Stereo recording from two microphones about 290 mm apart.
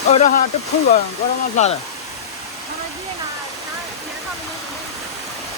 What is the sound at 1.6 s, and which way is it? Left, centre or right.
Speech, left.